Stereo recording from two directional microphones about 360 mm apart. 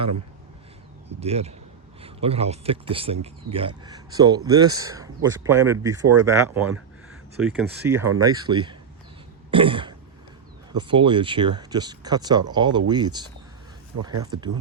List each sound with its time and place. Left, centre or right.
1.2 s speech: centre
9.5 s throat clearing: centre
10.7 s speech: centre